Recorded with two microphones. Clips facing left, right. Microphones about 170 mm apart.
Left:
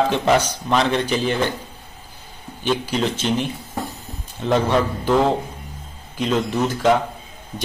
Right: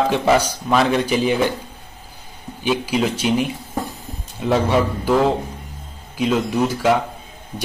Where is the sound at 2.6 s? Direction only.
10° right (ahead or behind).